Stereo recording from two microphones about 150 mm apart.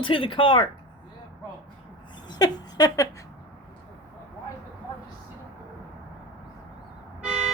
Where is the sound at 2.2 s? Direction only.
25° left (ahead or behind).